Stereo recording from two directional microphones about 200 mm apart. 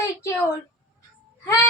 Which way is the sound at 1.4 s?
10° left (ahead or behind).